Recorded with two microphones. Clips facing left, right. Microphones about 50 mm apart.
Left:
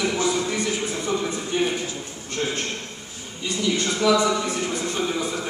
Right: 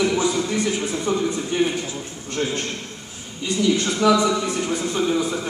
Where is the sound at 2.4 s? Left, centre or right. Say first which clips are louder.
Right 2 dB; centre.